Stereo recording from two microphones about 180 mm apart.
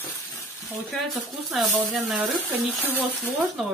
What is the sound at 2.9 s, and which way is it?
Speech, 10° left (ahead or behind).